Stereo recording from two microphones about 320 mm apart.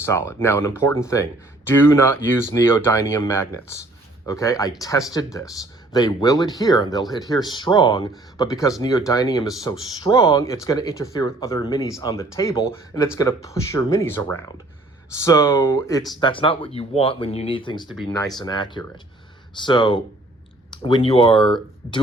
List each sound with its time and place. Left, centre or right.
0.0 s speech: centre